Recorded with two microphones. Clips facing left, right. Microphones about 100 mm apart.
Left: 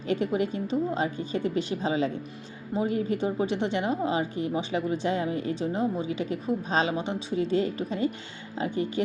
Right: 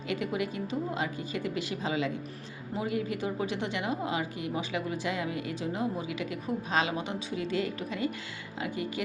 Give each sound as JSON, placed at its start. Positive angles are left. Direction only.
{"t": 0.1, "sound": "a woman's voice", "side_deg": 35}